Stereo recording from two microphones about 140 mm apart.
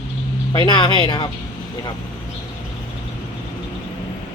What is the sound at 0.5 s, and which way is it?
Speech, 30° left (ahead or behind).